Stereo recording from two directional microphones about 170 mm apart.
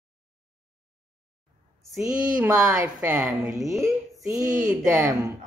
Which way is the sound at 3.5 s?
20° right (ahead or behind).